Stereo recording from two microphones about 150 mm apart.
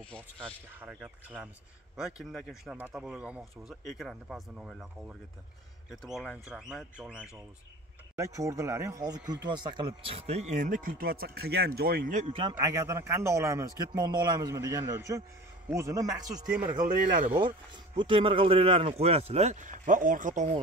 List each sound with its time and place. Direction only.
0.1 s speech: 5° left (ahead or behind)
0.7 s speech: 10° right (ahead or behind)
8.2 s speech: 20° right (ahead or behind); by 12.0 s 90° right
12.3 s speech: 35° right (ahead or behind)
12.5 s a man's voice: 20° right (ahead or behind)
17.2 s speech: 35° right (ahead or behind); by 20.4 s 60° right (ahead or behind)